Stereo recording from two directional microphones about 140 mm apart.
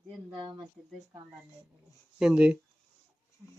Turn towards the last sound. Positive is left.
turn(degrees=-20)  # may be behind; listen again after turning